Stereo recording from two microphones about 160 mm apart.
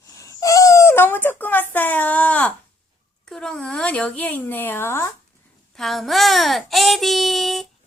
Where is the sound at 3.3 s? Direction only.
5° left (ahead or behind).